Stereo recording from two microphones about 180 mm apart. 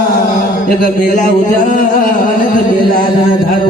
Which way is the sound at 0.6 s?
50° left (ahead or behind).